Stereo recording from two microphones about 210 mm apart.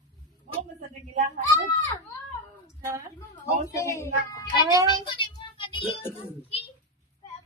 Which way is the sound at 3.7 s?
15° left (ahead or behind).